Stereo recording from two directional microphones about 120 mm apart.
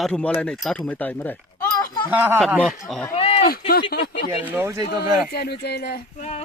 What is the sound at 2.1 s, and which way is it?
Speech, 15° right (ahead or behind).